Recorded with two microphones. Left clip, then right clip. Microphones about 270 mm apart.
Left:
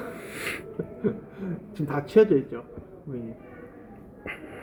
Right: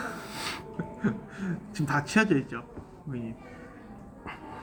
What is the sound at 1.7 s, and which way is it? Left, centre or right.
Speech, right.